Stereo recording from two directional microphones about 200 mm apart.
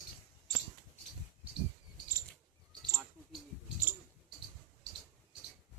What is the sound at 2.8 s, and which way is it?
Bird, 20° right (ahead or behind).